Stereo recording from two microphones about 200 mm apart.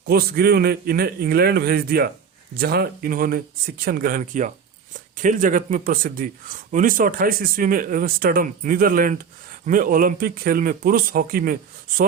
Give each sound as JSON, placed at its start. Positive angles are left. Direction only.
{"t": 0.1, "sound": "speech", "side_deg": -50}